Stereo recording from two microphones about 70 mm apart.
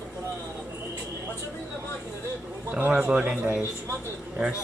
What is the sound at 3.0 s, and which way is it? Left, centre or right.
Speech, centre.